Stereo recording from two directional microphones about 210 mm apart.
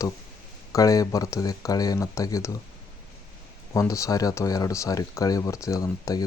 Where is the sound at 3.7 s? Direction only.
15° left (ahead or behind).